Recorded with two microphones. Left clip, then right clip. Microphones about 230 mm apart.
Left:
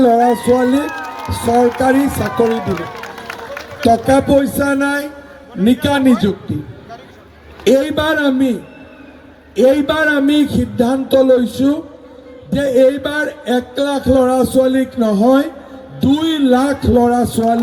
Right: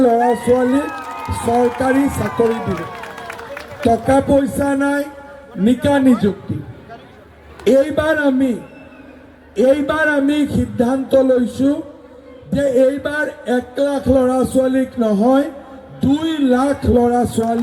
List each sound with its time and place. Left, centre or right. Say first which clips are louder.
0.0 s speech: left 2 dB; left
3.5 s a man's voice: left 3 dB; left
7.6 s speech: left 1 dB; left
9.6 s speech: left 2 dB; left